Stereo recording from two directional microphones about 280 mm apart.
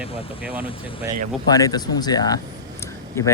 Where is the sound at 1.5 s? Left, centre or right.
Centre.